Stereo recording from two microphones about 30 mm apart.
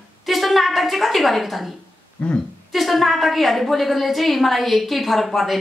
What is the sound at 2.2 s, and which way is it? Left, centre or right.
Speech, left.